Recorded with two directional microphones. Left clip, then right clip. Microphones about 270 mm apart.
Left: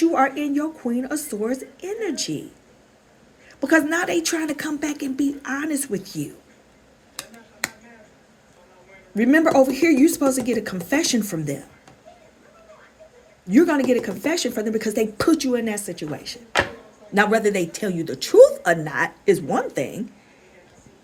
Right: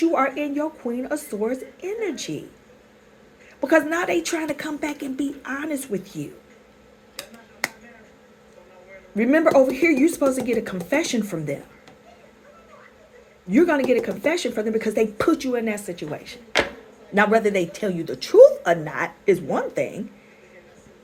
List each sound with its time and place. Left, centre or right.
0.0 s a woman's voice: left
3.6 s a woman's voice: left
9.1 s a woman's voice: left
13.5 s speech: left